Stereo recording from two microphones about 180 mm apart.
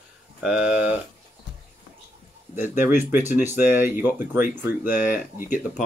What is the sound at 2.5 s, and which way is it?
Speech, 10° right (ahead or behind).